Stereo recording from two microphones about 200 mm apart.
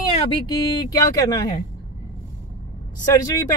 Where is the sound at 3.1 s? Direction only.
15° left (ahead or behind).